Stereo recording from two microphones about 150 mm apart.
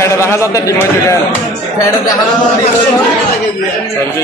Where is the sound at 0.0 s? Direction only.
20° left (ahead or behind).